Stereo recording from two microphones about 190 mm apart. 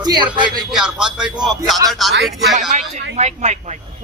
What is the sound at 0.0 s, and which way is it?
Speech, 20° right (ahead or behind).